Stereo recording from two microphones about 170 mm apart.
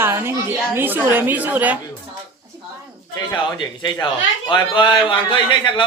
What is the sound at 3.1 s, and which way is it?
A man's voice, 25° left (ahead or behind).